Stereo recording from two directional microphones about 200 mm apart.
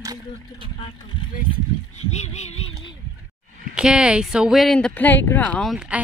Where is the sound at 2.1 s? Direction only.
35° left (ahead or behind).